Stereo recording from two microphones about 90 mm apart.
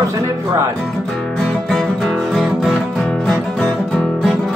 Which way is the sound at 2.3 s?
5° left (ahead or behind).